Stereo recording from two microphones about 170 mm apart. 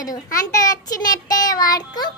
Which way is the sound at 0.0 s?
20° left (ahead or behind).